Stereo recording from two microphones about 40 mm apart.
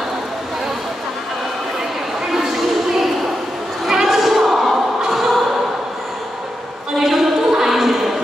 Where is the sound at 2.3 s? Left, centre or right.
Centre.